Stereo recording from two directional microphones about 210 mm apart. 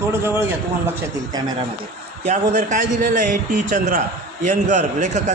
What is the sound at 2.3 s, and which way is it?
A man's voice, 35° right (ahead or behind).